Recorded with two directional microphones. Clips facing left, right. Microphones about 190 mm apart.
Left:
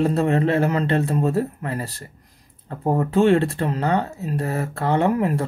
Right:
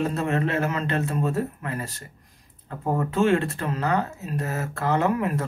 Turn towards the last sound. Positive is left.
turn(degrees=30)  # may be behind; listen again after turning